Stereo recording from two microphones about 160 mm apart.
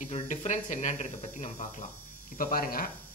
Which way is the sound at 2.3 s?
65° left (ahead or behind).